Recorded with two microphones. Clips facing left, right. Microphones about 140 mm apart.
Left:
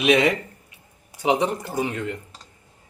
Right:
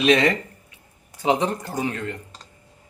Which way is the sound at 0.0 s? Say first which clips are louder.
Even; 10° left (ahead or behind).